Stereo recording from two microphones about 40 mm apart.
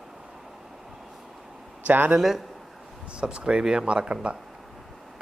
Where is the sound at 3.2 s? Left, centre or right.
Right.